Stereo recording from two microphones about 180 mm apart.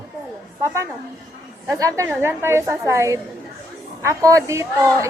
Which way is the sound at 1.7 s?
15° right (ahead or behind).